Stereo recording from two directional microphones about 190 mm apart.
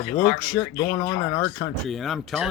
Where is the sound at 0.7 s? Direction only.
25° left (ahead or behind); by 1.9 s 10° left (ahead or behind).